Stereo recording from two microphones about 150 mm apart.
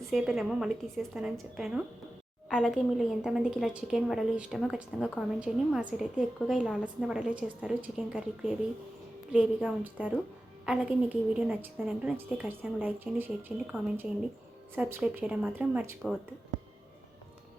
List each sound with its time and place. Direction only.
0.0 s a woman's voice: centre (ahead or behind)
14.8 s a woman's voice: 10° right (ahead or behind)